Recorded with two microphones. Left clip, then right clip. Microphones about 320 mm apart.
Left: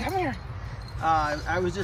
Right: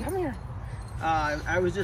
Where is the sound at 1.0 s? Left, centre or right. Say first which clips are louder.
Left 2 dB; centre.